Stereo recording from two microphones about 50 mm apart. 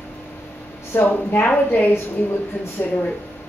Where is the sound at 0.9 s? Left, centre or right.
Left.